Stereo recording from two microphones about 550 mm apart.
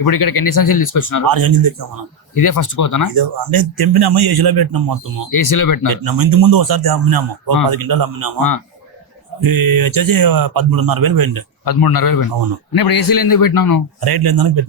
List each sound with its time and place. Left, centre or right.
0.4 s a man's voice: left
1.3 s a man's voice: right
2.4 s a man's voice: left
3.2 s a man's voice: right
5.4 s a man's voice: left
5.9 s a man's voice: right
9.4 s a man's voice: right
11.6 s a man's voice: left
14.0 s a man's voice: right